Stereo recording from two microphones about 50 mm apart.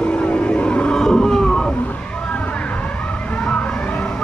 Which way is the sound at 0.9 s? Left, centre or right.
Centre.